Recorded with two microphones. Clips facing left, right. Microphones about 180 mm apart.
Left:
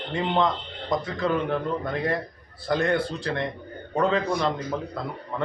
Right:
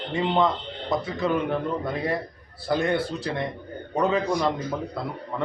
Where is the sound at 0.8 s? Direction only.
5° right (ahead or behind).